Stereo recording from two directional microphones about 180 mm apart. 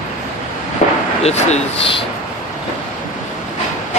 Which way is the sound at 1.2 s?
35° left (ahead or behind).